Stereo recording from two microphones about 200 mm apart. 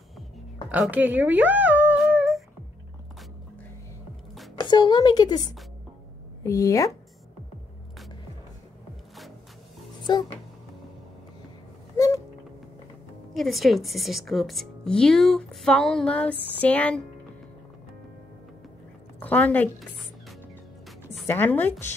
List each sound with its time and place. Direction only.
0.7 s speech: 5° right (ahead or behind)
4.6 s a woman's voice: 20° left (ahead or behind)
10.1 s speech: 20° left (ahead or behind)
13.3 s a woman's voice: centre (ahead or behind)
19.1 s a woman's voice: 10° left (ahead or behind)
21.3 s speech: 10° left (ahead or behind)